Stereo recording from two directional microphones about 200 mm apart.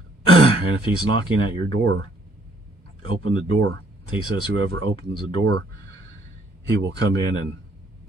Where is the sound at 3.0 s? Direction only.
90° right.